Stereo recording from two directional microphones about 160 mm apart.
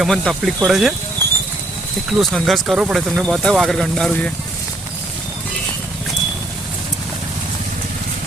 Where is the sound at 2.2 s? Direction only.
Centre (ahead or behind).